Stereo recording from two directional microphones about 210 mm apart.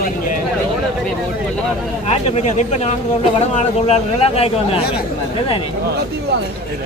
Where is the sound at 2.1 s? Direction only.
30° left (ahead or behind).